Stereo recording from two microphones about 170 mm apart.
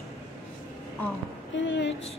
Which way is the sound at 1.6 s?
90° left.